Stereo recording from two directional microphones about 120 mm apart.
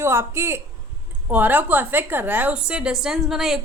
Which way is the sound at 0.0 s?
20° right (ahead or behind).